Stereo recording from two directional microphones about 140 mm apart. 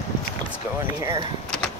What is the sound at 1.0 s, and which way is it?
Speech, 20° right (ahead or behind).